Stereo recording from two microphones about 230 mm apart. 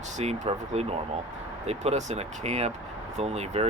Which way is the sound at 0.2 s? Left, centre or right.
Right.